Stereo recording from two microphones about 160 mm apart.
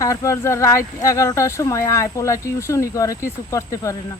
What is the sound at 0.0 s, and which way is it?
Speech, 20° left (ahead or behind).